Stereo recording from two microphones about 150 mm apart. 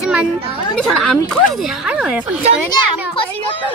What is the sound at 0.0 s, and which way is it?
Children playing, 10° right (ahead or behind).